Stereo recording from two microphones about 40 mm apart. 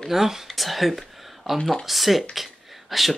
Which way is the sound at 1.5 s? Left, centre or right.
Centre.